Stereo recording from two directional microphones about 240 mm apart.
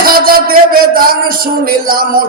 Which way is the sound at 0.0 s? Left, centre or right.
Right.